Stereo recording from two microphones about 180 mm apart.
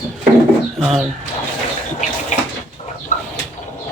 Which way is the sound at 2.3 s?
40° left (ahead or behind).